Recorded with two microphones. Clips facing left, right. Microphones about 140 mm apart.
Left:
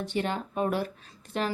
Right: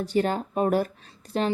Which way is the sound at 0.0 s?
40° right (ahead or behind).